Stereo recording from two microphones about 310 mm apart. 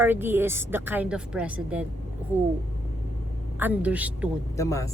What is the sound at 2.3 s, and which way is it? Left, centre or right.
Speech, centre.